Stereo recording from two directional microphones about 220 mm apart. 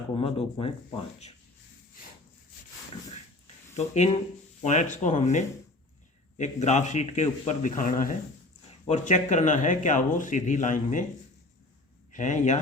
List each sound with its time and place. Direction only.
0.1 s speech: 25° left (ahead or behind)
3.8 s speech: 30° left (ahead or behind)
12.1 s speech: 35° left (ahead or behind)